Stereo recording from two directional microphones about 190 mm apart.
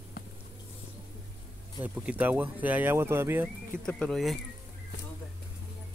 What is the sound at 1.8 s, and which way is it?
Speech, 10° right (ahead or behind).